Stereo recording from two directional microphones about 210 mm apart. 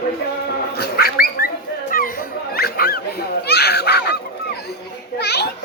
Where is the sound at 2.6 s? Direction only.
50° left (ahead or behind).